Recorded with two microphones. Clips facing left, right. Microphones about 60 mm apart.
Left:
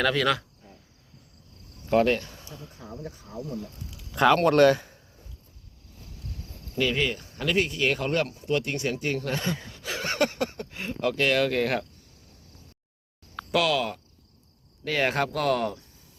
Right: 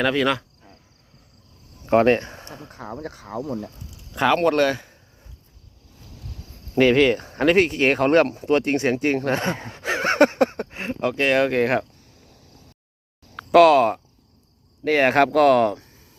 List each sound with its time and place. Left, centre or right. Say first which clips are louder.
0.0 s speech: right 3 dB; right
1.9 s speech: right 5 dB; right
2.4 s a sound: right 5 dB; right
2.6 s speech: right 7 dB; right
4.1 s speech: right 1 dB; centre
6.7 s speech: right 10 dB; right
13.5 s speech: right 12 dB; right
15.2 s speech: right 10 dB; right